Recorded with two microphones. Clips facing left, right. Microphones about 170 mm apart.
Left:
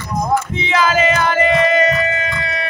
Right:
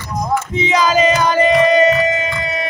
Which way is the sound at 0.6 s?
15° right (ahead or behind).